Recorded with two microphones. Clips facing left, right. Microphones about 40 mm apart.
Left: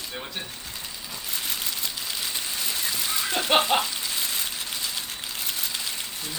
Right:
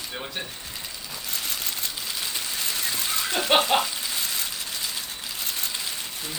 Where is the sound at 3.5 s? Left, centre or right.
Centre.